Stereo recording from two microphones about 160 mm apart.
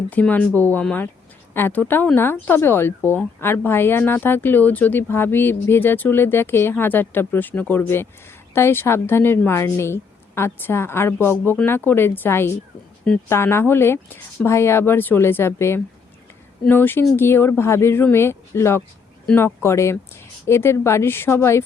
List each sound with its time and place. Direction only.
0.1 s a woman's voice: 10° left (ahead or behind)